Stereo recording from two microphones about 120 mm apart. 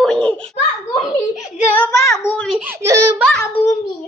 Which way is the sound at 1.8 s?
25° left (ahead or behind).